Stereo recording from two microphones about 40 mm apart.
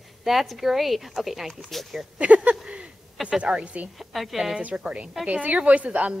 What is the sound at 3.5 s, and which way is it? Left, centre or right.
Speech, right.